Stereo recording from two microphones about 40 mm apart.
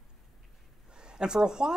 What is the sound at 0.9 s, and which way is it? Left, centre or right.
Speech, right.